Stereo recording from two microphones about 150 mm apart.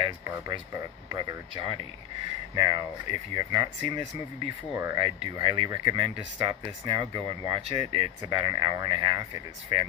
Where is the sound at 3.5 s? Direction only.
25° right (ahead or behind).